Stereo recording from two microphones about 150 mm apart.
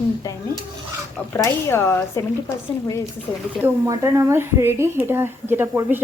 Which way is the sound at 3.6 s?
20° right (ahead or behind).